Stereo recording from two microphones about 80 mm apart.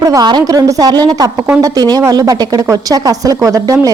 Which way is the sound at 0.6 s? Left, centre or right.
Right.